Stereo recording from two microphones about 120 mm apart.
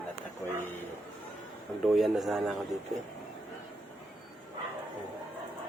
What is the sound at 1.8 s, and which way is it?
Speech, centre (ahead or behind).